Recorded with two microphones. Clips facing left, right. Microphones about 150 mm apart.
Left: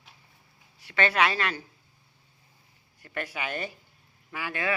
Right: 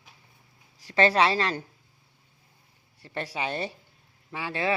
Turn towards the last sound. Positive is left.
turn(degrees=-25)  # may be behind; listen again after turning